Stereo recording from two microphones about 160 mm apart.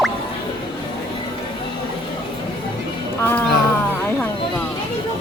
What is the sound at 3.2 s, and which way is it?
Music, 10° left (ahead or behind).